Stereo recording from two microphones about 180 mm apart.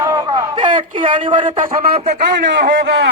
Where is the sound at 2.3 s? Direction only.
55° right (ahead or behind).